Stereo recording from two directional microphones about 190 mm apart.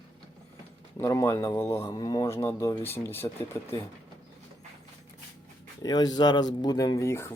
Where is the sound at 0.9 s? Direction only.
15° left (ahead or behind).